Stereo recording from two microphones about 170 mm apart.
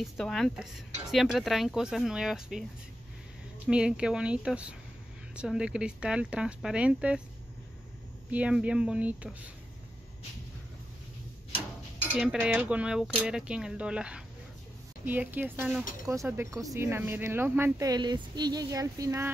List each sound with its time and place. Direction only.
0.0 s speech: centre (ahead or behind)
3.6 s speech: 5° right (ahead or behind)
8.3 s speech: 5° right (ahead or behind)
12.1 s speech: 5° right (ahead or behind)